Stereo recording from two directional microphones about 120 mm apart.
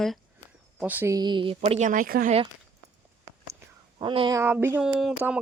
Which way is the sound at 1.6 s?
75° right (ahead or behind).